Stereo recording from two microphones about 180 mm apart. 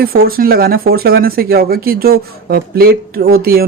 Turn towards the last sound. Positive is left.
turn(degrees=-55)  # may be behind; listen again after turning